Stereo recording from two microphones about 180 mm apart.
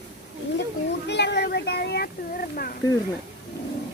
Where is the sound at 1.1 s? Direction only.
70° left (ahead or behind); by 2.8 s 55° left (ahead or behind).